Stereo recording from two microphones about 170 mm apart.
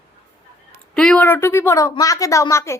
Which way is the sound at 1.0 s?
5° left (ahead or behind).